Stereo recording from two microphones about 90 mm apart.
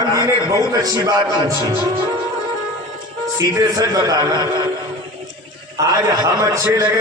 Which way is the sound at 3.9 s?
40° right (ahead or behind).